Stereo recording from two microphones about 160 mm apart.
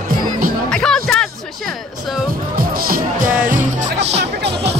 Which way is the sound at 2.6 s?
65° right (ahead or behind).